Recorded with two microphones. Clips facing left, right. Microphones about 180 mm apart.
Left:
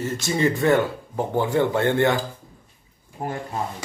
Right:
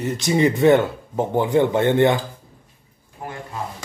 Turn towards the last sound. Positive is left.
turn(degrees=40)  # may be behind; listen again after turning